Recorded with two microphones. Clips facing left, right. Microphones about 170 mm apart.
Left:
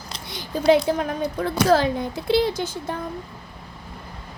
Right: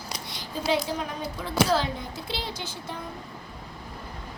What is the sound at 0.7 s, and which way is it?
Speech, 55° left (ahead or behind).